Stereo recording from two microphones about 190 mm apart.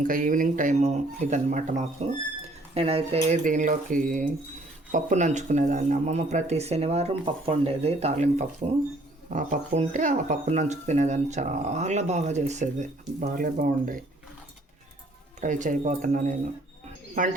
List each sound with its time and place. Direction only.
0.0 s speech: 45° right (ahead or behind)
15.4 s speech: 40° right (ahead or behind)